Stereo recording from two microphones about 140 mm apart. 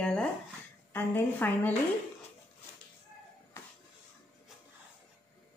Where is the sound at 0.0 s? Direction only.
5° left (ahead or behind).